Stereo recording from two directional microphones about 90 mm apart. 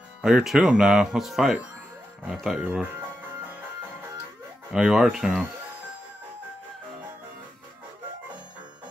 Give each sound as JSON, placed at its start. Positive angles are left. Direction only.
{"t": 0.2, "sound": "speech", "side_deg": -5}
{"t": 2.8, "sound": "music", "side_deg": -20}
{"t": 4.7, "sound": "speech", "side_deg": -5}